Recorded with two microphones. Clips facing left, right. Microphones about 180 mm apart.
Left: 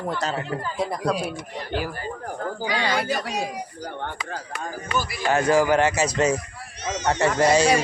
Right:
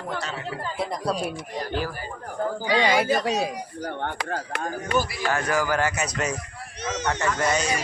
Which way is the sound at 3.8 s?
55° right (ahead or behind).